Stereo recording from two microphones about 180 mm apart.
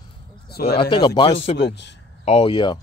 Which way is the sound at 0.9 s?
25° left (ahead or behind).